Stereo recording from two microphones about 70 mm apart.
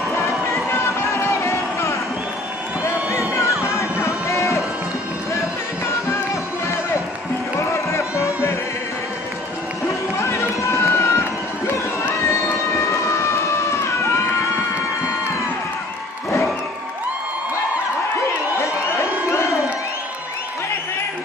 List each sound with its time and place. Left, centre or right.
0.1 s music: left
2.8 s a sound: left
3.6 s music: left
7.7 s music: left
9.8 s run: left
18.6 s crowd: left